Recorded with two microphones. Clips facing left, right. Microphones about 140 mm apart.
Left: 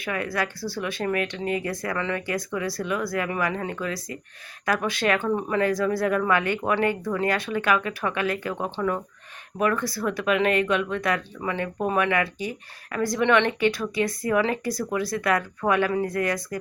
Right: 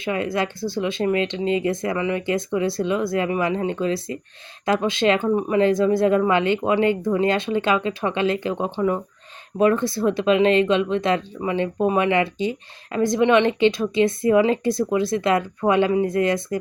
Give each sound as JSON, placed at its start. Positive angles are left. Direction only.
{"t": 0.0, "sound": "speech", "side_deg": -25}